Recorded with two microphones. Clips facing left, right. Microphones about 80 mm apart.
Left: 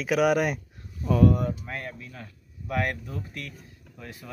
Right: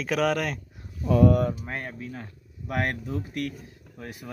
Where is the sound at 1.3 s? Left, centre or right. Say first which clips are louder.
Right 3 dB; right.